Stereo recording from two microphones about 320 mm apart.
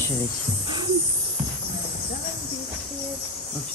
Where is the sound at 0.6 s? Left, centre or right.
Centre.